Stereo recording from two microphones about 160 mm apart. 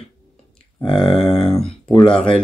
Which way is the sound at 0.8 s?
30° left (ahead or behind).